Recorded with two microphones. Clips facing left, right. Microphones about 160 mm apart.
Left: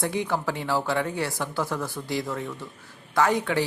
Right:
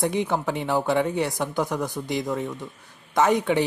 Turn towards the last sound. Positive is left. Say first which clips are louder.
# right 3 dB
turn(degrees=-20)  # may be behind; listen again after turning